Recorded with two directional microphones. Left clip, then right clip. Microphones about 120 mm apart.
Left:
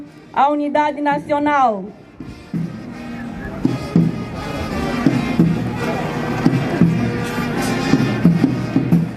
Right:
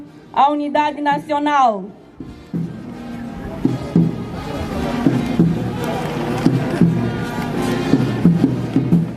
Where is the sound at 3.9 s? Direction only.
15° left (ahead or behind).